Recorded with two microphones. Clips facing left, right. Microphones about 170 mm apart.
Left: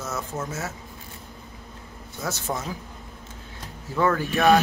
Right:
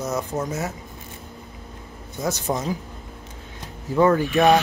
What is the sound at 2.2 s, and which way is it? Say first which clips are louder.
Speech: right 5 dB; 20° right (ahead or behind).